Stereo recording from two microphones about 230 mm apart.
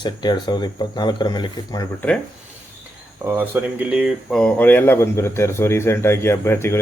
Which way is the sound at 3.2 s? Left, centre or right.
Centre.